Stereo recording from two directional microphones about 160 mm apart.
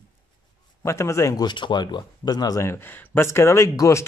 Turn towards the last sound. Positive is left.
turn(degrees=20)  # may be behind; listen again after turning